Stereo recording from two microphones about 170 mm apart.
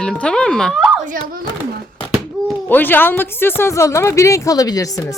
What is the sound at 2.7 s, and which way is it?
Speech, 10° left (ahead or behind).